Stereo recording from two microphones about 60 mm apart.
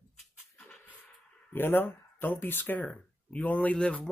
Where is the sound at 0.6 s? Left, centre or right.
Left.